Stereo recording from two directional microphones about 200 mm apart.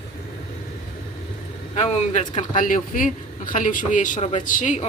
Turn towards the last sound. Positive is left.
turn(degrees=40)  # may be behind; listen again after turning